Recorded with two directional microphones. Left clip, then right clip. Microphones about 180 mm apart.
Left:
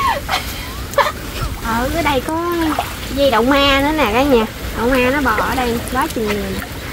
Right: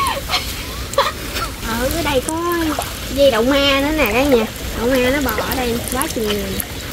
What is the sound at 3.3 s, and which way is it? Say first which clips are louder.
Speech: left 4 dB; 10° left (ahead or behind).